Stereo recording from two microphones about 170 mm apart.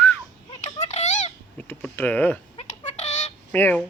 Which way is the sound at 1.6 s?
10° left (ahead or behind).